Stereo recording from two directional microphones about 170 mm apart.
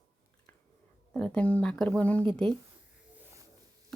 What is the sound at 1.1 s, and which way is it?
Speech, 5° left (ahead or behind).